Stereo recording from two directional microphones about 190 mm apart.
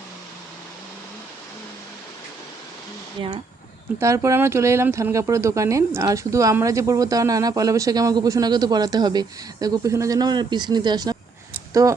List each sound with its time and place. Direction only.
3.2 s speech: 25° right (ahead or behind)